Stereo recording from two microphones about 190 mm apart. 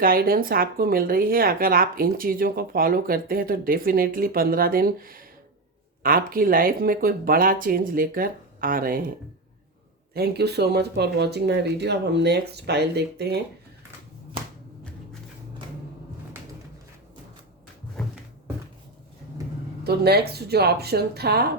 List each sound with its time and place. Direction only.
0.0 s speech: 50° right (ahead or behind)
10.2 s speech: 60° right (ahead or behind)
19.8 s speech: 55° right (ahead or behind)